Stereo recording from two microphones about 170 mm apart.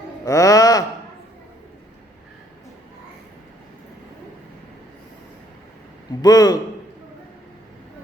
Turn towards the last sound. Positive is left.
turn(degrees=20)  # may be behind; listen again after turning